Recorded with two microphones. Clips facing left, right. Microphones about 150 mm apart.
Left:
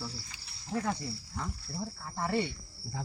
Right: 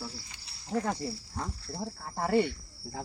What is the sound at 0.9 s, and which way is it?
Speech, 35° right (ahead or behind).